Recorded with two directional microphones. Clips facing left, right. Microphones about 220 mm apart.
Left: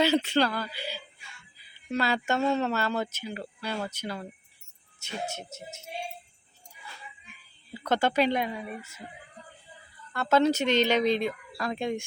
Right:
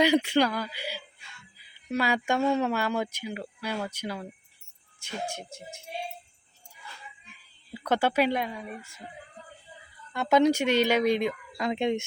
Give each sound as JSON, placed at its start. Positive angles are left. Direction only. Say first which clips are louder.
{"t": 0.0, "sound": "speech", "louder": "right 2 dB", "side_deg": -15}
{"t": 5.0, "sound": "speech", "louder": "even", "side_deg": 5}
{"t": 7.7, "sound": "speech", "louder": "even", "side_deg": -10}
{"t": 10.1, "sound": "speech", "louder": "right 1 dB", "side_deg": -15}